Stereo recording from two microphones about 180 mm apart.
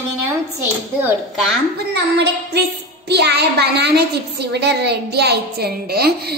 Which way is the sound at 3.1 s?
65° right (ahead or behind).